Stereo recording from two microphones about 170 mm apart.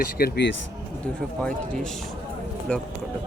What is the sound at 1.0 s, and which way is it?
Speech, 5° left (ahead or behind).